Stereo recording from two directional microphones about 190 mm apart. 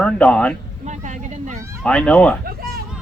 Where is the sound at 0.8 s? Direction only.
40° right (ahead or behind).